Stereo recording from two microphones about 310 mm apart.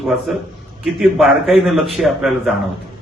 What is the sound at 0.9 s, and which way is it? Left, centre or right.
A man's voice, centre.